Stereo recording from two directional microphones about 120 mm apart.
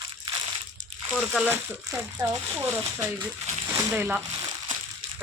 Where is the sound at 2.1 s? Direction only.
30° right (ahead or behind).